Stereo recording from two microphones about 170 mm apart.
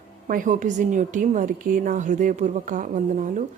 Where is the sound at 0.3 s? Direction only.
50° right (ahead or behind).